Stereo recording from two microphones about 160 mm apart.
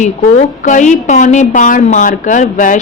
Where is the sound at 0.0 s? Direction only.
50° left (ahead or behind).